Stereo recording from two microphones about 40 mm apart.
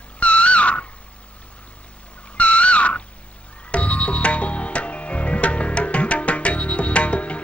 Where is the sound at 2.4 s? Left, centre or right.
Left.